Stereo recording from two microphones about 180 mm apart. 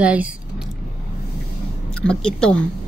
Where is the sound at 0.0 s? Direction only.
10° right (ahead or behind).